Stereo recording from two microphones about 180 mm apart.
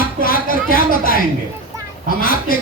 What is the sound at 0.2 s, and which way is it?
Speech, 55° left (ahead or behind).